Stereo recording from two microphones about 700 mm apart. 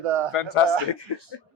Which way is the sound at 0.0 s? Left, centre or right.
Right.